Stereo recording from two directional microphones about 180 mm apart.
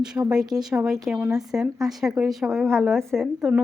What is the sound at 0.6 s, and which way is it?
Speech, 5° right (ahead or behind).